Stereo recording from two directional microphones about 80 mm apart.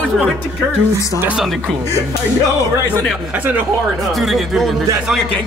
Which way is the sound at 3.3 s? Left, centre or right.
Right.